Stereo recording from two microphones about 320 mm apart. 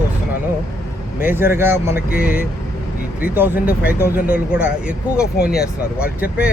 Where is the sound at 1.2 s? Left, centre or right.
Centre.